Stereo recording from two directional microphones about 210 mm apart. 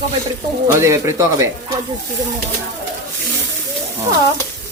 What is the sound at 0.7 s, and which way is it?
Speech, 15° right (ahead or behind).